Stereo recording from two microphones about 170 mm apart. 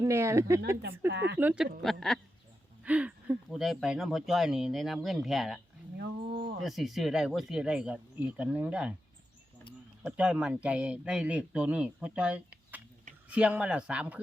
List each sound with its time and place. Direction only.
0.0 s speech: 15° right (ahead or behind)
0.8 s speech: 80° right
1.4 s speech: 10° right (ahead or behind)
6.0 s a sound: 70° right (ahead or behind)
6.6 s speech: centre (ahead or behind)
10.0 s speech: 5° right (ahead or behind)